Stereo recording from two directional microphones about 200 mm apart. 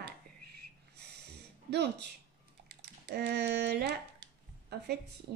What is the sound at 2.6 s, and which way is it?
Typing, 55° right (ahead or behind).